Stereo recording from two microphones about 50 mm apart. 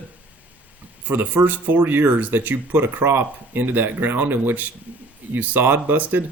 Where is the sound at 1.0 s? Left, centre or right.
Right.